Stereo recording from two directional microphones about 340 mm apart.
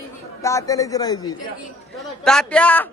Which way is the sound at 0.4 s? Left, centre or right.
Centre.